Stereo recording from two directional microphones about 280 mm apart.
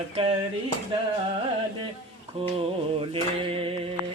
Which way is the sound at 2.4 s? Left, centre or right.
Centre.